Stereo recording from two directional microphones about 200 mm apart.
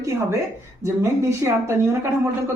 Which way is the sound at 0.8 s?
15° right (ahead or behind).